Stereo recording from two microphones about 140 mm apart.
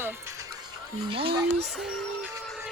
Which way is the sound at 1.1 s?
40° right (ahead or behind).